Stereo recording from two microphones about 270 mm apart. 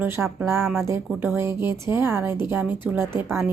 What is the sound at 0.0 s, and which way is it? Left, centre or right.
A woman's voice, centre.